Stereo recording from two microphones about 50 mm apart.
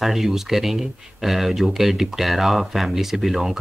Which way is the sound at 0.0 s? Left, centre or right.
Centre.